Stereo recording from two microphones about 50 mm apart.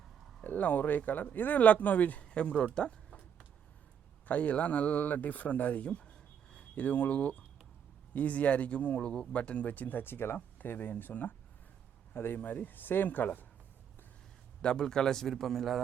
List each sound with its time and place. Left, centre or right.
0.4 s speech: left
2.3 s speech: left
4.3 s speech: left
6.5 s a sound: left
6.8 s speech: left
9.0 s a man's voice: centre
9.3 s speech: left
10.0 s speech: left
10.3 s speech: left
12.1 s speech: left
12.4 s speech: left
14.6 s a man's voice: centre